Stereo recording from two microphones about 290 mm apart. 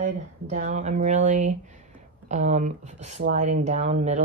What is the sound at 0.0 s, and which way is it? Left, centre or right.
Speech, right.